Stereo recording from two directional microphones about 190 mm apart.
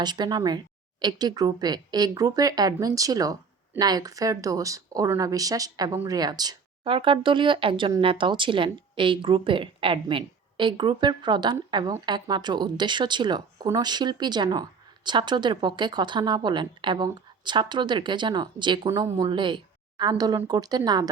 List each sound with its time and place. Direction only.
0.0 s speech: 20° right (ahead or behind)